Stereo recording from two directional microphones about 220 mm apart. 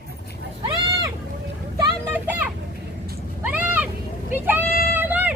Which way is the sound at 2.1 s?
10° right (ahead or behind).